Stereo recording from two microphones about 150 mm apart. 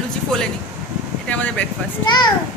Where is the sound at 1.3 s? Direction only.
10° left (ahead or behind).